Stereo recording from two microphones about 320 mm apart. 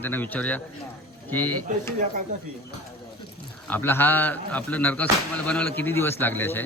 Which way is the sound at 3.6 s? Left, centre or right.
Centre.